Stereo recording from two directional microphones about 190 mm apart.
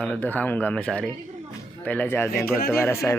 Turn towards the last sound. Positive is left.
turn(degrees=15)  # may be behind; listen again after turning